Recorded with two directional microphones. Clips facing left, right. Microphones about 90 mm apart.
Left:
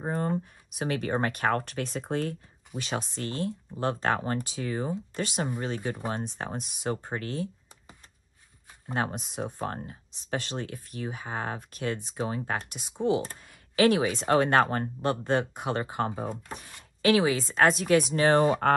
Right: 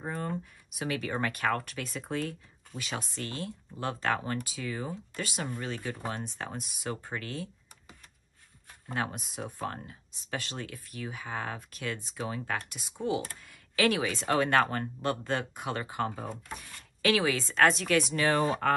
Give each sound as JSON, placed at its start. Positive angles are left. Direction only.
{"t": 0.0, "sound": "speech", "side_deg": 30}
{"t": 2.8, "sound": "speech", "side_deg": 25}
{"t": 9.1, "sound": "speech", "side_deg": 30}
{"t": 18.1, "sound": "speech", "side_deg": 35}
{"t": 18.4, "sound": "speech", "side_deg": 45}